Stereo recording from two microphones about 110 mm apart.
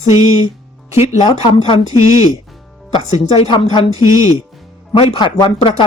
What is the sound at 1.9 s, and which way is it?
Speech, 30° right (ahead or behind).